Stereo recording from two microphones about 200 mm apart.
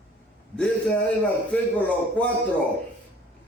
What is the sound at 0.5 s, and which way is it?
Speech, 5° left (ahead or behind).